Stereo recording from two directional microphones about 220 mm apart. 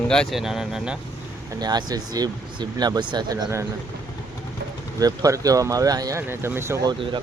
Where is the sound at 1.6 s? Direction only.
20° right (ahead or behind).